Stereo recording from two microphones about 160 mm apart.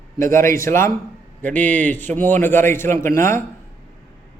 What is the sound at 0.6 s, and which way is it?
A man's voice, 15° left (ahead or behind).